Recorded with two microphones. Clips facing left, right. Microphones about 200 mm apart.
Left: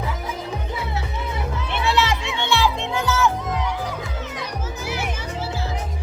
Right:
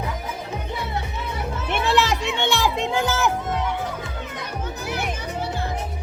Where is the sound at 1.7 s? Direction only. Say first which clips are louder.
Right 1 dB; 50° right (ahead or behind).